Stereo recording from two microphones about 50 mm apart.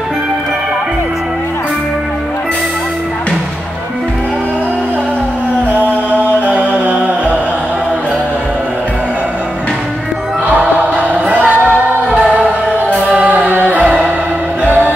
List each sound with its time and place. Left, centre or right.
6.1 s music: right
11.0 s music: right
14.6 s music: right